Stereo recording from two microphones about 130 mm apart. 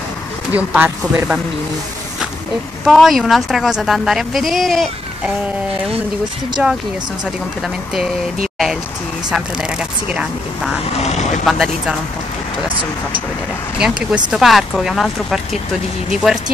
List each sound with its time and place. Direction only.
0.5 s speech: 15° right (ahead or behind)
2.8 s a woman's voice: centre (ahead or behind)
7.6 s a woman's voice: 5° right (ahead or behind)
9.3 s speech: 5° right (ahead or behind)
11.0 s speech: 60° left (ahead or behind)
11.4 s a woman's voice: centre (ahead or behind)
13.7 s a woman's voice: 5° right (ahead or behind)